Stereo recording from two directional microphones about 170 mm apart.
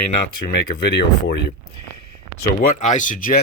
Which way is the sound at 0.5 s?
90° left.